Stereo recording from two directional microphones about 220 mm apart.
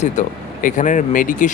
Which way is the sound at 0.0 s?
35° left (ahead or behind).